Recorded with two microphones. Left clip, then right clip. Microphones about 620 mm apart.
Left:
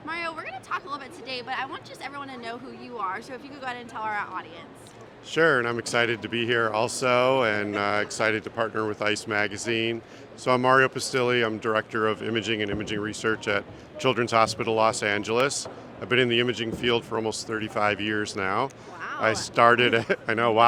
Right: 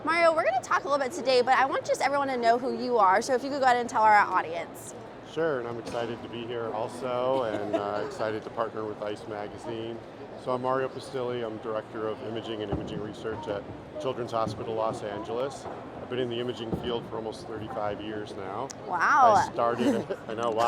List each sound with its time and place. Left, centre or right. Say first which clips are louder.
0.1 s speech: right 10 dB; right
5.3 s speech: left 8 dB; left
6.0 s speech: left 10 dB; left
6.5 s speech: left 8 dB; left
10.4 s speech: left 8 dB; left
14.3 s speech: left 8 dB; left
17.7 s speech: left 7 dB; left
18.2 s speech: left 8 dB; left
18.9 s speech: right 14 dB; right
19.2 s speech: left 5 dB; left